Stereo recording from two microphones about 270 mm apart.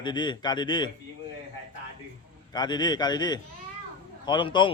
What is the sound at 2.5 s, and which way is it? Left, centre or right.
Speech, centre.